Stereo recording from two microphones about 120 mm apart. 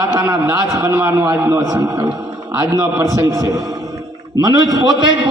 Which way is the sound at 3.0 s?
30° right (ahead or behind).